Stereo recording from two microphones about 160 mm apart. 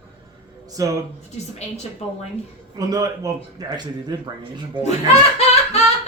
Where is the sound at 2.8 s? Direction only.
25° right (ahead or behind).